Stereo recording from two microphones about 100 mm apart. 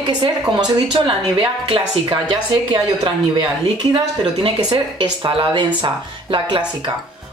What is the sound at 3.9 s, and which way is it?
Speech, 60° right (ahead or behind).